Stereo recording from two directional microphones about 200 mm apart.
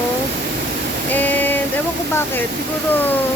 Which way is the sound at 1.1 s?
10° left (ahead or behind).